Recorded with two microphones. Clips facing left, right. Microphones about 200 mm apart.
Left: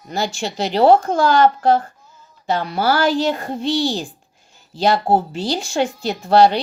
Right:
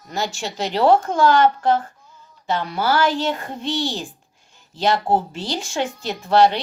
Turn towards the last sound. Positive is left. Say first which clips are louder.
# left 3 dB
turn(degrees=35)  # may be behind; listen again after turning